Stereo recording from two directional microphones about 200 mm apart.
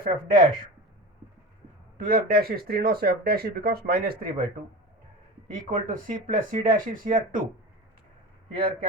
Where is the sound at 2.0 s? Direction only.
45° right (ahead or behind).